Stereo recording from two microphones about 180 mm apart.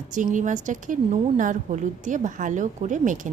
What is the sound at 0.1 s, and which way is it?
A woman's voice, 45° right (ahead or behind).